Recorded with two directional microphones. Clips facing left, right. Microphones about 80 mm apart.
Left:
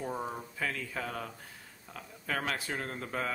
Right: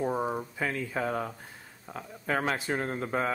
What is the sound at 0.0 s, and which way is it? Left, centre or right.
Speech, right.